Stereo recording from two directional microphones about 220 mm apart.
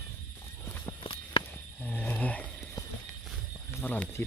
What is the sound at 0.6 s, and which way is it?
Clip-clop, 10° left (ahead or behind).